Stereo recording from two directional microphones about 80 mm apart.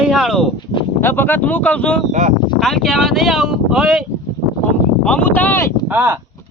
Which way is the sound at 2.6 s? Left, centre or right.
Centre.